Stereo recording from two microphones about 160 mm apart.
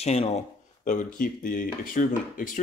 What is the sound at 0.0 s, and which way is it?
Speech, 40° left (ahead or behind).